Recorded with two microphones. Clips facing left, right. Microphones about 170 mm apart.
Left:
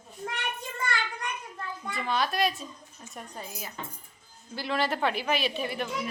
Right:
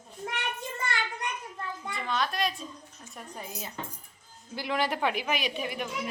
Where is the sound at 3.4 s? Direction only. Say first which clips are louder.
Right 2 dB; 20° right (ahead or behind).